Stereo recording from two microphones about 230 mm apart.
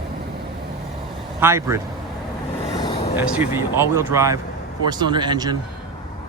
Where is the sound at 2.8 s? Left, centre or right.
Centre.